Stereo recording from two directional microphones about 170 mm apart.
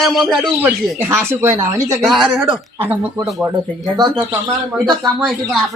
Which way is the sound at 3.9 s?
25° right (ahead or behind).